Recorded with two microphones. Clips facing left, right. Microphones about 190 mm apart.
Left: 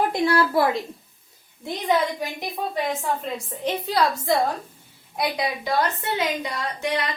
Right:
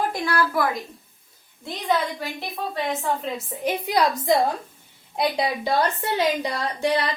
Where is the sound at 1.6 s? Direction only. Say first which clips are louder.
Left 2 dB; 15° left (ahead or behind).